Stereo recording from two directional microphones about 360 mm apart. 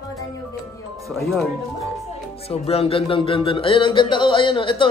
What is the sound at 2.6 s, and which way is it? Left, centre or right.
Speech, centre.